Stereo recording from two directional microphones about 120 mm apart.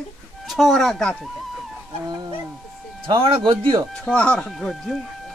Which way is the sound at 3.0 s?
45° right (ahead or behind).